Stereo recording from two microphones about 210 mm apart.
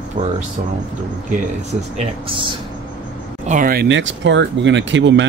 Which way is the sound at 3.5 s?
40° right (ahead or behind).